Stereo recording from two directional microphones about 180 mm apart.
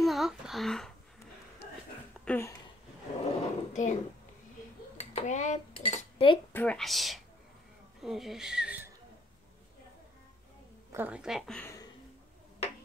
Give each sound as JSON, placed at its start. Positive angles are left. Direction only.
{"t": 0.0, "sound": "speech", "side_deg": 0}
{"t": 2.2, "sound": "speech", "side_deg": 10}
{"t": 3.3, "sound": "a sound", "side_deg": 45}
{"t": 4.9, "sound": "dishes", "side_deg": 40}
{"t": 6.5, "sound": "a woman's voice", "side_deg": 10}
{"t": 10.9, "sound": "a woman's voice", "side_deg": -10}